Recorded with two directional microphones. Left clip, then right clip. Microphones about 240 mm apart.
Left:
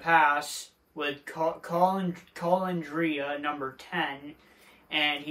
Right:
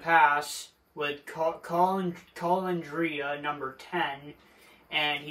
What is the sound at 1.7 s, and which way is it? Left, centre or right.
Speech, centre.